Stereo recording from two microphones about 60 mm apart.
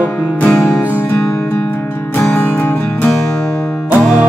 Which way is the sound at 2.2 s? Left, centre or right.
Left.